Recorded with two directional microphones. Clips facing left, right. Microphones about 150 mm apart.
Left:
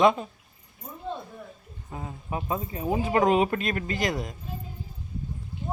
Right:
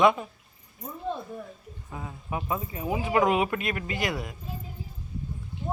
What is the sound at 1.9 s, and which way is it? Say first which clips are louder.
Speech: left 1 dB; 30° left (ahead or behind).